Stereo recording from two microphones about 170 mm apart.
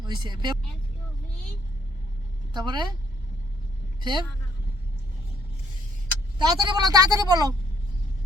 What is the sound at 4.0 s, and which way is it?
Speech, 25° right (ahead or behind).